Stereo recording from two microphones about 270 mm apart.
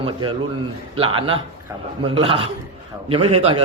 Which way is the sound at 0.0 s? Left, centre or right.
Centre.